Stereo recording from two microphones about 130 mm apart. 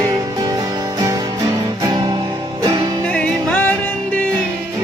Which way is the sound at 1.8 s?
30° right (ahead or behind).